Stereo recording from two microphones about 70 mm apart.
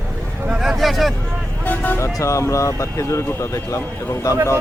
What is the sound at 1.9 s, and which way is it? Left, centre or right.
Speech, left.